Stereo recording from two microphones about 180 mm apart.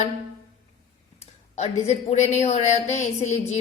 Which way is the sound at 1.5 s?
40° left (ahead or behind).